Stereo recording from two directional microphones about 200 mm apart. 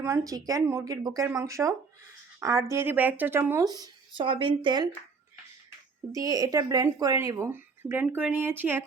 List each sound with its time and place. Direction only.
0.0 s speech: 15° right (ahead or behind)
6.1 s speech: 15° right (ahead or behind)